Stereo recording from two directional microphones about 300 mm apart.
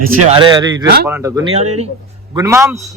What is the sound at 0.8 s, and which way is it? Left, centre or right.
Speech, right.